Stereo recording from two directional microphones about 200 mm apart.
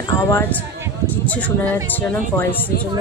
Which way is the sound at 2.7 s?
50° left (ahead or behind).